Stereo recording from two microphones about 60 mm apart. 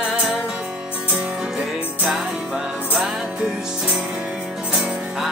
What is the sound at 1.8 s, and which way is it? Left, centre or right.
Music, right.